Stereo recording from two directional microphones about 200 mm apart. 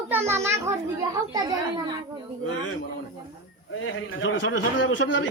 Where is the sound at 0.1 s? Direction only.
10° right (ahead or behind).